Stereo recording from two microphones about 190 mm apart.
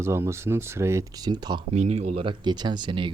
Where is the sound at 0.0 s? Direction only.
15° right (ahead or behind).